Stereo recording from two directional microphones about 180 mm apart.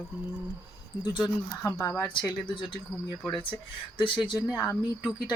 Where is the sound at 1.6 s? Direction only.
15° left (ahead or behind).